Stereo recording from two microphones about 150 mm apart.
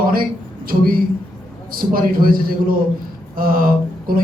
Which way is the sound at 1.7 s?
75° right (ahead or behind).